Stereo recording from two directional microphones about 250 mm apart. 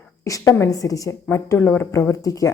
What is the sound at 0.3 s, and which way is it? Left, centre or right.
Speech, centre.